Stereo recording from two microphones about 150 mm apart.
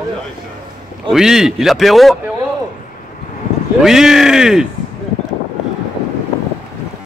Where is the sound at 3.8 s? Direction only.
5° right (ahead or behind).